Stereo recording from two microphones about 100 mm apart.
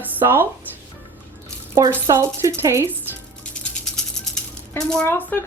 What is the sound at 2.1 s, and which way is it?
Speech, 30° right (ahead or behind).